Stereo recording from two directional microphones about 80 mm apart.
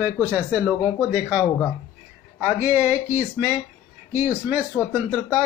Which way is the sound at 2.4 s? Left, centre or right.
Right.